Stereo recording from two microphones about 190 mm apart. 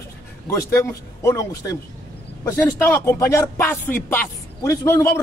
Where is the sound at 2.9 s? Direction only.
10° left (ahead or behind).